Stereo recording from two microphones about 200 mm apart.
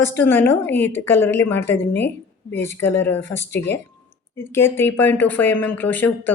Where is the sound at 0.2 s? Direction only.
10° left (ahead or behind).